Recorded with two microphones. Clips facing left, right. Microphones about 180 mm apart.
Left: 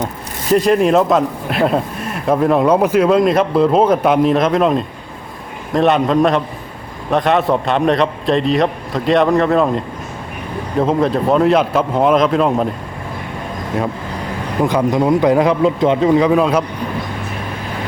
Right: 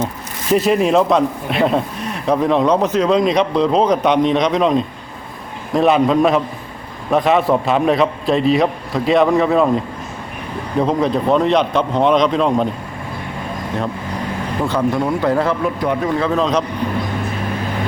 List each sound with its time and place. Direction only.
0.5 s speech: centre (ahead or behind)
14.6 s a man's voice: 15° left (ahead or behind)